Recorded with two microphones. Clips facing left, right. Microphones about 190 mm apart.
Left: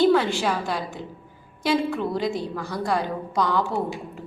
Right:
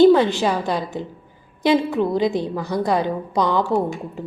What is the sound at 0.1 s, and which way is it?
A woman's voice, 20° right (ahead or behind).